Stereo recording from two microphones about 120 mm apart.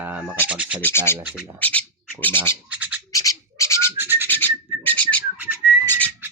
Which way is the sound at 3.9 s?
15° right (ahead or behind).